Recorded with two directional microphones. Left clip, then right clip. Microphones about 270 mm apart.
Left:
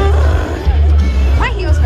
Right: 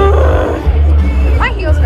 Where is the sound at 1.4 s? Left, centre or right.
Left.